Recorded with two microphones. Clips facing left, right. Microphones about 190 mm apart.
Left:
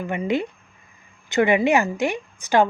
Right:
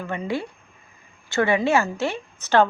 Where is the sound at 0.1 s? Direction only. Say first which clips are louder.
Left 4 dB; 20° left (ahead or behind).